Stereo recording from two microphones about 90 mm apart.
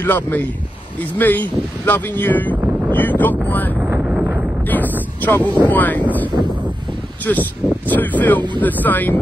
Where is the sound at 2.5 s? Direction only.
20° right (ahead or behind).